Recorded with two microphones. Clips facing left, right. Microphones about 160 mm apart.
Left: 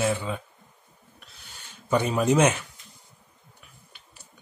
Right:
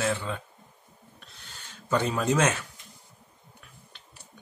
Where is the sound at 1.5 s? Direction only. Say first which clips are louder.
Left 3 dB; 15° left (ahead or behind).